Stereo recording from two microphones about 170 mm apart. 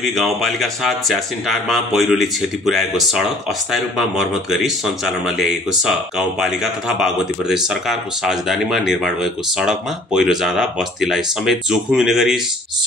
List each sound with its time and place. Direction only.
0.1 s speech: centre (ahead or behind)